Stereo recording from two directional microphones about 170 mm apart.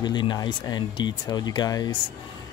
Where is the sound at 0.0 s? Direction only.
25° left (ahead or behind).